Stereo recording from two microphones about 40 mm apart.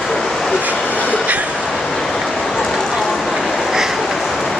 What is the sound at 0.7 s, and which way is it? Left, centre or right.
Train, left.